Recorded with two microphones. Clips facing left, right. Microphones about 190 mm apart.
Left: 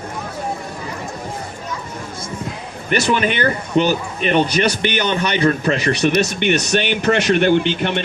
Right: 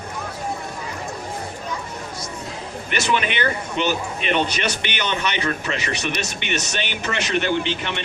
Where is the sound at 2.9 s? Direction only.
40° left (ahead or behind).